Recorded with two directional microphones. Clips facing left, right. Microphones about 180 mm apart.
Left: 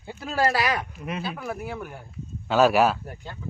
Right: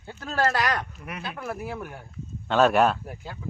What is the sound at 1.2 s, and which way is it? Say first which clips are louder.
Speech: left 1 dB; centre (ahead or behind).